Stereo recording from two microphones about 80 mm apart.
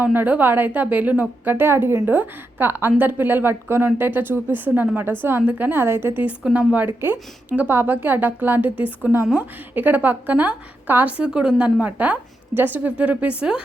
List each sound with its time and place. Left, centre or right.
0.0 s a woman's voice: right
6.2 s a woman's voice: centre
11.3 s a woman's voice: centre